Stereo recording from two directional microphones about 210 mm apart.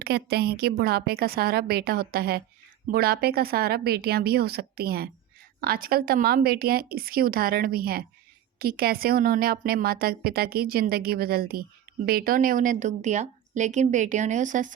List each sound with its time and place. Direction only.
0.0 s a woman's voice: 50° right (ahead or behind)